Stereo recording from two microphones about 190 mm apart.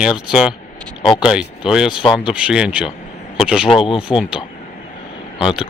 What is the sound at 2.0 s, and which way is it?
Speech, 25° left (ahead or behind).